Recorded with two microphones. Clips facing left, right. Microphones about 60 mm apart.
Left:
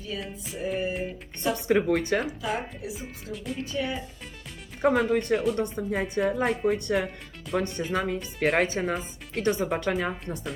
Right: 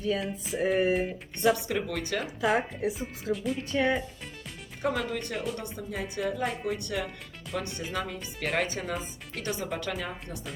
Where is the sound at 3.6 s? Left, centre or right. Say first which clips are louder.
Right 5 dB; right.